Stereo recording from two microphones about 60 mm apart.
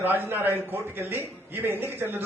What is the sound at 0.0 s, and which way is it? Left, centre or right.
A man's voice, right.